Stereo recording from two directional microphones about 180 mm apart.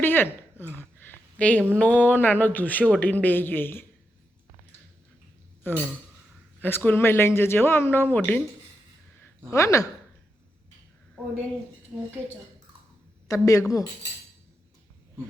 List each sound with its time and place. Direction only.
0.0 s speech: 10° left (ahead or behind)
0.6 s a sound: 10° left (ahead or behind)
1.5 s speech: 10° right (ahead or behind)
1.8 s a man's voice: 10° left (ahead or behind)
5.7 s a man's voice: 10° left (ahead or behind)
9.5 s a man's voice: 15° left (ahead or behind)
13.2 s a woman's voice: 20° left (ahead or behind)